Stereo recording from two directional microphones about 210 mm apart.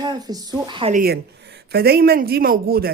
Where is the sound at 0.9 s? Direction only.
45° right (ahead or behind).